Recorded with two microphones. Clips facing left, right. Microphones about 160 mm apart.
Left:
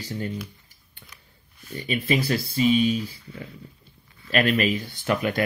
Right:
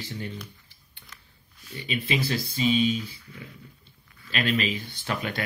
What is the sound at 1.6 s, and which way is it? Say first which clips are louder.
Speech: left 5 dB; 50° left (ahead or behind).